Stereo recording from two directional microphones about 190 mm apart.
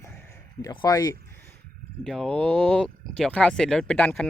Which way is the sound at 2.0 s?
Centre (ahead or behind).